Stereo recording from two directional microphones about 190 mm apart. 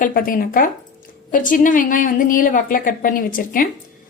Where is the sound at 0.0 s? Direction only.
45° left (ahead or behind).